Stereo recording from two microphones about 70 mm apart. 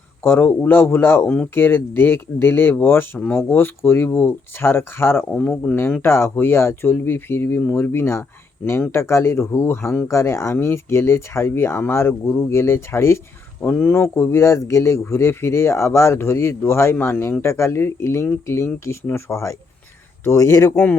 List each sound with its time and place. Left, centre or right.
0.2 s speech: left
3.2 s speech: left
13.6 s speech: left
20.7 s speech: left